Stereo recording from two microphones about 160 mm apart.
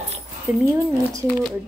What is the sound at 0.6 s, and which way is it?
Speech, 20° right (ahead or behind).